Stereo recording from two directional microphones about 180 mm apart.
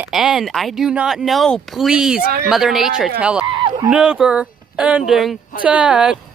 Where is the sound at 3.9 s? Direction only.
5° right (ahead or behind).